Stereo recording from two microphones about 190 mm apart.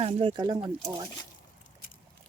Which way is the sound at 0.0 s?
30° right (ahead or behind).